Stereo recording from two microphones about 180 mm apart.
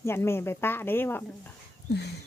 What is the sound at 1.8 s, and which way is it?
Dog, 65° left (ahead or behind).